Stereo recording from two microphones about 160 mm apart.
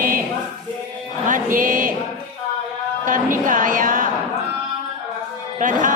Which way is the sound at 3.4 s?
55° right (ahead or behind).